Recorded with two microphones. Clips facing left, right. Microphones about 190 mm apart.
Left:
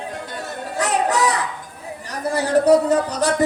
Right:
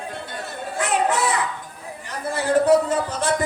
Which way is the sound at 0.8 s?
40° left (ahead or behind).